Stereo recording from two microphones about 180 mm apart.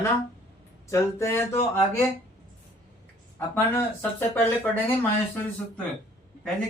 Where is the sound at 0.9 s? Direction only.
15° left (ahead or behind).